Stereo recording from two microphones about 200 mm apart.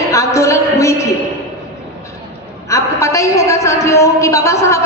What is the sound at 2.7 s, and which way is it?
A woman's voice, 15° left (ahead or behind).